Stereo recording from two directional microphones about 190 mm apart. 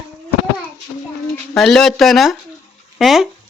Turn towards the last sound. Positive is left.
turn(degrees=0)  # may be behind; listen again after turning